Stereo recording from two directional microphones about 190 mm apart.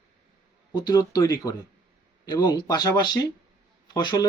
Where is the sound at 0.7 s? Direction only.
20° left (ahead or behind).